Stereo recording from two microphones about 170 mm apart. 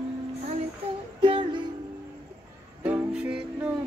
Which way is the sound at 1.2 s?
30° right (ahead or behind).